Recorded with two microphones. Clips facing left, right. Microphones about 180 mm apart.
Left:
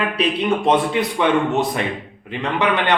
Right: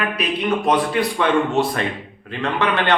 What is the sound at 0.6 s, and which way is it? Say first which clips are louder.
A man's voice: even; 20° left (ahead or behind).